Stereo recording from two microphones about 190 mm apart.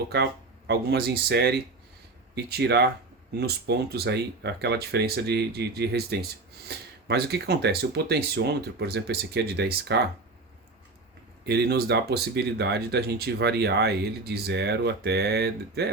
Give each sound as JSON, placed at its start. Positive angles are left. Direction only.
{"t": 0.1, "sound": "speech", "side_deg": -55}
{"t": 11.4, "sound": "speech", "side_deg": -60}